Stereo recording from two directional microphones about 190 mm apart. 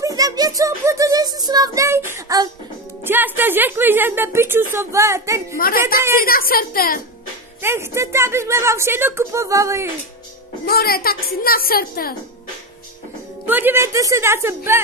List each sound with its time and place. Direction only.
0.0 s a child's voice: 20° right (ahead or behind)
6.2 s a woman's voice: 50° left (ahead or behind)
7.6 s speech: 15° right (ahead or behind)
10.6 s a woman's voice: 55° left (ahead or behind)
13.5 s speech: 10° right (ahead or behind)